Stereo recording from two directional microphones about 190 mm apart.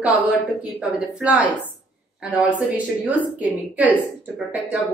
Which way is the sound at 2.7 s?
10° right (ahead or behind).